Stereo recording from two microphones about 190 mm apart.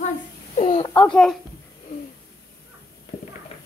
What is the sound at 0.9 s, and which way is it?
Speech, 5° left (ahead or behind).